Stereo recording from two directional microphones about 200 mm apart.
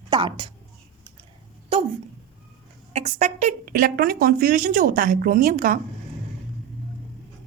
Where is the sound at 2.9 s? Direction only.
35° right (ahead or behind).